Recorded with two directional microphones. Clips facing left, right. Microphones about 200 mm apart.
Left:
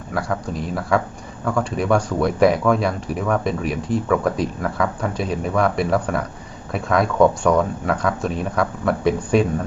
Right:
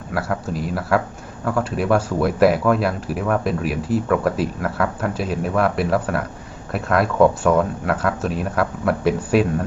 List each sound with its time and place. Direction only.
0.1 s speech: 5° right (ahead or behind)